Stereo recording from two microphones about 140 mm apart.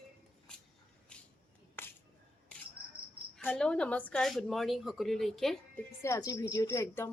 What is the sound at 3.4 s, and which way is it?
Speech, 10° left (ahead or behind).